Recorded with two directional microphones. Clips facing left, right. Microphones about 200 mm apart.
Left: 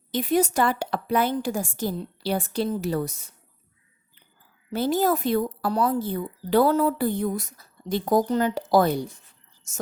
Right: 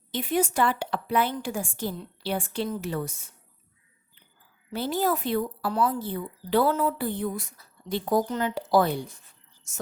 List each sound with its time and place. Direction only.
0.1 s a woman's voice: 40° left (ahead or behind)
4.7 s speech: 45° left (ahead or behind)